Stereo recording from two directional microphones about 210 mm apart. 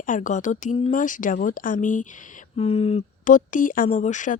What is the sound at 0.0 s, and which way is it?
Speech, 40° left (ahead or behind).